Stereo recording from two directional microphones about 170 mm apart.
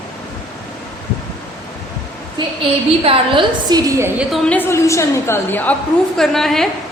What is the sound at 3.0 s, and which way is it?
Speech, 30° right (ahead or behind).